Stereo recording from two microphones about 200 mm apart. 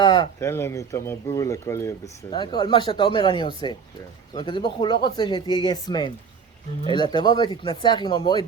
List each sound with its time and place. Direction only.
0.0 s speech: 20° left (ahead or behind)